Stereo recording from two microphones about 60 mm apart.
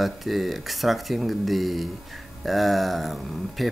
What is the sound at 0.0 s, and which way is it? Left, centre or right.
Speech, centre.